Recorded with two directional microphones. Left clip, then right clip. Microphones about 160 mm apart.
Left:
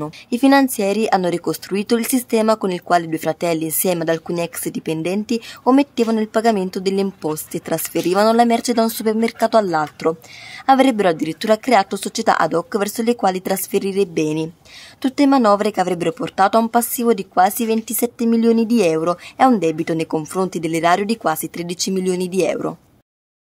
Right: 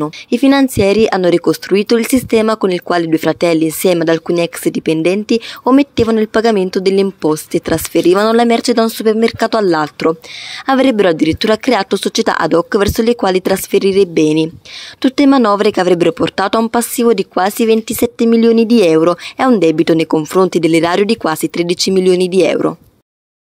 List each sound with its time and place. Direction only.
0.0 s speech: 20° right (ahead or behind)